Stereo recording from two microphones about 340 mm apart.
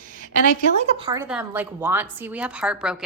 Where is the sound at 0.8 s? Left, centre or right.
Centre.